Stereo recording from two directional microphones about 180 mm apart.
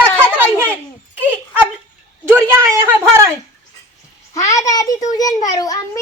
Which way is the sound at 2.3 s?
15° right (ahead or behind).